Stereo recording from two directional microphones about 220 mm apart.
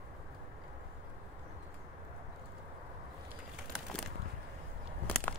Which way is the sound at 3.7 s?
Centre (ahead or behind).